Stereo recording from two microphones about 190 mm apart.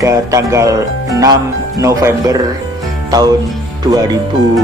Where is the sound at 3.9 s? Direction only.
20° right (ahead or behind).